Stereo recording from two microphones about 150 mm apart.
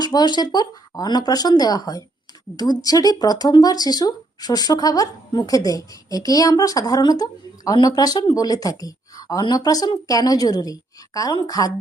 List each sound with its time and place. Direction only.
0.0 s speech: 25° left (ahead or behind)